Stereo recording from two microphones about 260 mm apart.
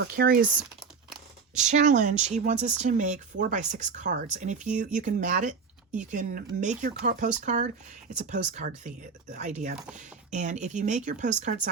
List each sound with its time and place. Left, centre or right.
0.4 s crumpling: centre
1.5 s speech: right